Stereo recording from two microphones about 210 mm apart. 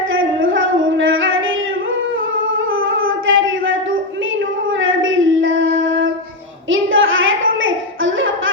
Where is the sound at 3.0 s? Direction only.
70° right (ahead or behind).